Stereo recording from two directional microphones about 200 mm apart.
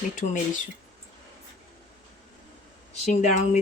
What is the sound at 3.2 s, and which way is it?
Speech, 35° left (ahead or behind).